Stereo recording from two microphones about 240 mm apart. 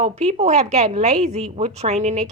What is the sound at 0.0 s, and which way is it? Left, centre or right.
A woman's voice, right.